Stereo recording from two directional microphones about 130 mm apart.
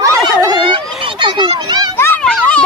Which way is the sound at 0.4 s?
35° right (ahead or behind).